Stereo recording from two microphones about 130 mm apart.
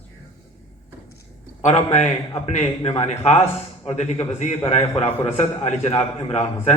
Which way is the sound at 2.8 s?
45° left (ahead or behind).